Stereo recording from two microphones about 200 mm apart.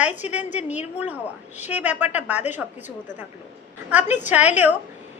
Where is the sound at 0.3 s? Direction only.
10° right (ahead or behind).